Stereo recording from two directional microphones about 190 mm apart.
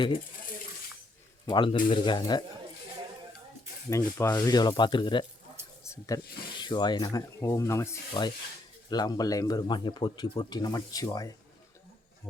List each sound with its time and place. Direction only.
1.5 s speech: 25° left (ahead or behind)
3.8 s speech: 15° left (ahead or behind)